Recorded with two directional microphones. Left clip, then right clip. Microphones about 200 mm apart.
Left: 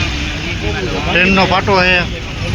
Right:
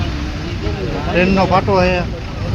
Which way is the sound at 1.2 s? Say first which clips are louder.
Left 2 dB; centre (ahead or behind).